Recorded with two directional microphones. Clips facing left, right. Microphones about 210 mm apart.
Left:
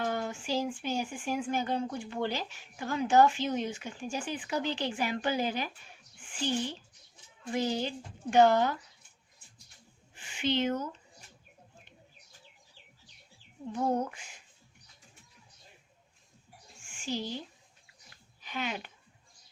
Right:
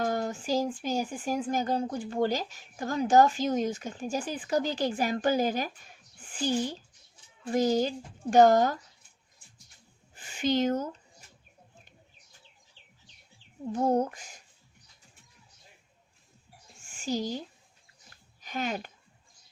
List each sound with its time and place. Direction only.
0.0 s speech: 40° right (ahead or behind)
10.2 s speech: 40° right (ahead or behind)
13.7 s speech: 40° right (ahead or behind)
16.9 s speech: 40° right (ahead or behind)
18.1 s a sound: 45° right (ahead or behind)